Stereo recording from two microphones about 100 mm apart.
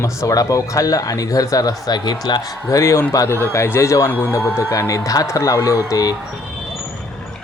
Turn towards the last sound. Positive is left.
turn(degrees=35)  # may be behind; listen again after turning